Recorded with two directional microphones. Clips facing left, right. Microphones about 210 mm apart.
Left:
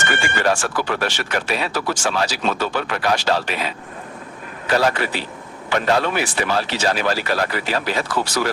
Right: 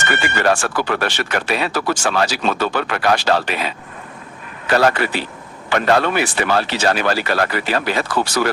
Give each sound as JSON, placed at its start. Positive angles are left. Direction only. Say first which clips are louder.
{"t": 0.4, "sound": "speech", "louder": "right 3 dB", "side_deg": -60}
{"t": 4.7, "sound": "speech", "louder": "right 3 dB", "side_deg": -65}